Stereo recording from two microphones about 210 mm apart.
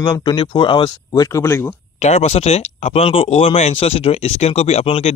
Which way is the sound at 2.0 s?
30° left (ahead or behind).